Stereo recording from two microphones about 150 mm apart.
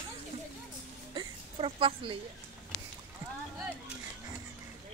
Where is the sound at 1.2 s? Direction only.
35° right (ahead or behind).